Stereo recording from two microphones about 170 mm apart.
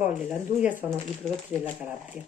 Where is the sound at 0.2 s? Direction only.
5° right (ahead or behind).